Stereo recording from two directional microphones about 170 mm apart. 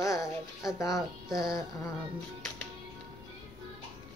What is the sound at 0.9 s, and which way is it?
Speech, centre (ahead or behind).